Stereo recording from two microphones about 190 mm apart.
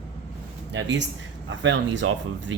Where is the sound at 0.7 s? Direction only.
70° right (ahead or behind).